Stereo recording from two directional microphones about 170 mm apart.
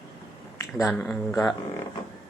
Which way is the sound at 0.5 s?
15° left (ahead or behind).